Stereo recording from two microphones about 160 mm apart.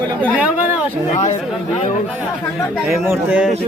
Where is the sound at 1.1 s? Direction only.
45° left (ahead or behind).